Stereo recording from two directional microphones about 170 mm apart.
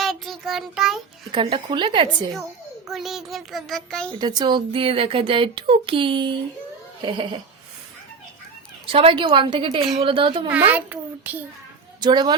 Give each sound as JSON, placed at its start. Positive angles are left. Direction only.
{"t": 0.0, "sound": "child singing", "side_deg": 0}
{"t": 1.3, "sound": "a woman's voice", "side_deg": -30}
{"t": 2.9, "sound": "a child's voice", "side_deg": 0}
{"t": 4.2, "sound": "speech", "side_deg": -25}
{"t": 8.9, "sound": "a woman's voice", "side_deg": -35}
{"t": 10.7, "sound": "a child's voice", "side_deg": -10}
{"t": 11.9, "sound": "a woman's voice", "side_deg": -25}